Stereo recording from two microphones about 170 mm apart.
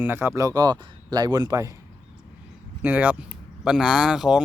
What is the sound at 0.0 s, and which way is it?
Speech, 15° right (ahead or behind).